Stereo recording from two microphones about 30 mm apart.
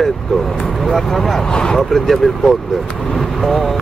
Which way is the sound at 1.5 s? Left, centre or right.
Left.